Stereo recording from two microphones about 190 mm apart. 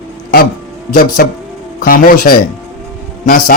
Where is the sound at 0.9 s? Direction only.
50° left (ahead or behind).